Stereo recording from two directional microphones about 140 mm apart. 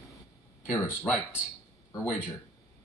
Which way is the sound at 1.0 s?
5° right (ahead or behind).